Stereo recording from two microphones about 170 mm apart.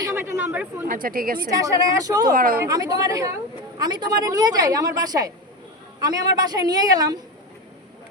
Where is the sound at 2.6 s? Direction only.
20° right (ahead or behind).